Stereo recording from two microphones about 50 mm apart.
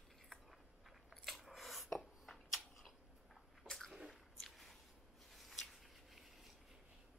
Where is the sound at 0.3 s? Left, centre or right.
Centre.